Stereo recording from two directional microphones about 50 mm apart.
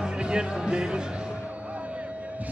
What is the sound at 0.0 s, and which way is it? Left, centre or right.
Music, centre.